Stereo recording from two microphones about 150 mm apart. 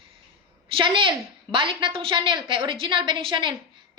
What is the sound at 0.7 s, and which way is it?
A woman's voice, 35° right (ahead or behind).